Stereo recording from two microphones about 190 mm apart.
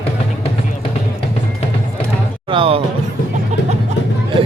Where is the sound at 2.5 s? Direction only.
30° right (ahead or behind).